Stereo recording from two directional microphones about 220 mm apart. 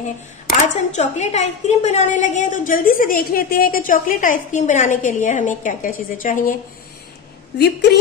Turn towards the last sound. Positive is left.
turn(degrees=50)  # may be behind; listen again after turning